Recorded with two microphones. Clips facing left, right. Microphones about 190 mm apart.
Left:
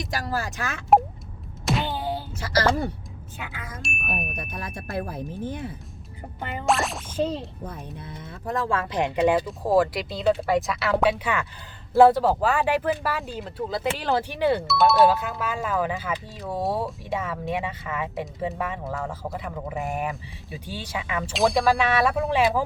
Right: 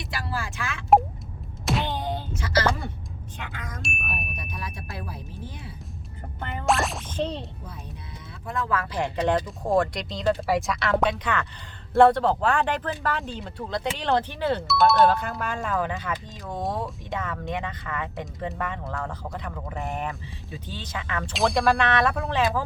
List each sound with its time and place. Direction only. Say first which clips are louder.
0.0 s speech: left 4 dB; 40° left (ahead or behind)
1.6 s a sound: left 1 dB; centre (ahead or behind)
2.3 s speech: left 2 dB; 40° left (ahead or behind)
3.3 s speech: left 1 dB; 5° left (ahead or behind)
4.1 s speech: left 4 dB; 50° left (ahead or behind)
6.4 s speech: even; centre (ahead or behind)
8.4 s speech: left 2 dB; 35° left (ahead or behind); by 14.6 s 15° left (ahead or behind)
14.7 s speech: right 1 dB; centre (ahead or behind)